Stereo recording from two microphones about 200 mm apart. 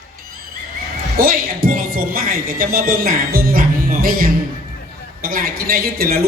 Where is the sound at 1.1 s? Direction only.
45° right (ahead or behind).